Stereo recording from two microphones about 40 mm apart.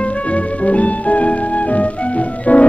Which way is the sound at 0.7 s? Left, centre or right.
Left.